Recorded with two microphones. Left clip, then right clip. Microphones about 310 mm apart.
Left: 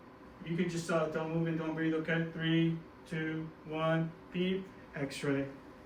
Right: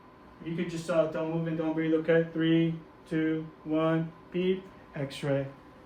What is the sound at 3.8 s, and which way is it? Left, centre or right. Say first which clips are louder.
Speech: right 4 dB; right.